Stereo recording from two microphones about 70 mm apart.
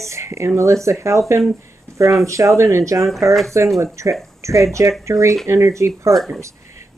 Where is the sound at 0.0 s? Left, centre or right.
Right.